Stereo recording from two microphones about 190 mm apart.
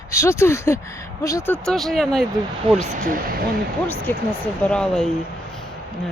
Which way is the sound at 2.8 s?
45° right (ahead or behind).